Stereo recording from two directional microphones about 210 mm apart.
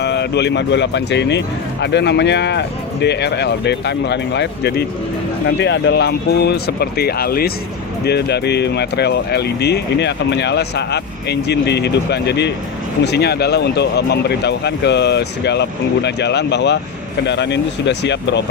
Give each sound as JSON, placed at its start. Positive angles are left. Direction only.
{"t": 0.0, "sound": "speech", "side_deg": 50}